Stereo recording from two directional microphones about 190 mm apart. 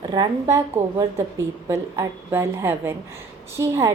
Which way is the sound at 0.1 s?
20° right (ahead or behind).